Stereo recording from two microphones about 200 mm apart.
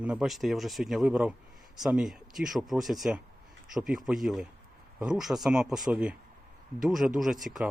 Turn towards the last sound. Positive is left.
turn(degrees=0)  # may be behind; listen again after turning